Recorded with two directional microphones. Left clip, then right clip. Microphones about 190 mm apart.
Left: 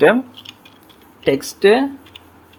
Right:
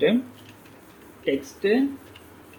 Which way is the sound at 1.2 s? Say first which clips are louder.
Left 10 dB; 45° left (ahead or behind).